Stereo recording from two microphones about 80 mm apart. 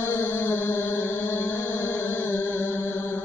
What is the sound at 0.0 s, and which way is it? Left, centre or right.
Chant, left.